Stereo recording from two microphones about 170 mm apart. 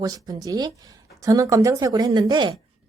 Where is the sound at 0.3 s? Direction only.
20° right (ahead or behind).